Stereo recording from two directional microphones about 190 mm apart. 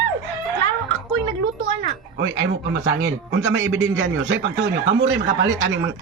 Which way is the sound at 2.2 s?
85° right.